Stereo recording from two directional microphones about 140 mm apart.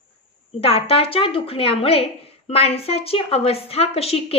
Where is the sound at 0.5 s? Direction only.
45° left (ahead or behind).